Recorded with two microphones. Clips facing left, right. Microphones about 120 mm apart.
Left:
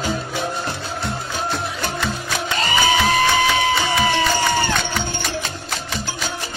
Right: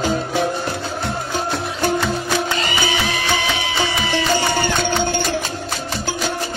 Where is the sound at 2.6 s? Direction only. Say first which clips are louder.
Left 3 dB; 45° left (ahead or behind).